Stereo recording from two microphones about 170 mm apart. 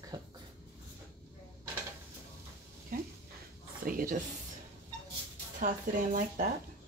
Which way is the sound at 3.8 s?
55° right (ahead or behind).